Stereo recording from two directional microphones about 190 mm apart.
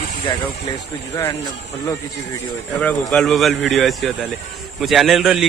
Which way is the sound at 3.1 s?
Centre (ahead or behind).